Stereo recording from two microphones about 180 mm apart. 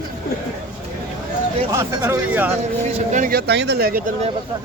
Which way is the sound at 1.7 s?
15° right (ahead or behind).